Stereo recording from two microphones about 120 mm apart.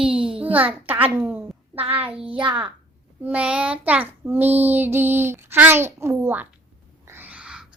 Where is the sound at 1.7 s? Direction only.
50° right (ahead or behind).